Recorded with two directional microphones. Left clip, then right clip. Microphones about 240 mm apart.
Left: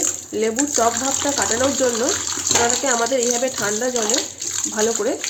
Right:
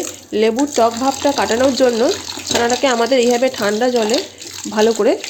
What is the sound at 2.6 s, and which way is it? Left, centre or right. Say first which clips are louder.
Frying: right 7 dB; right.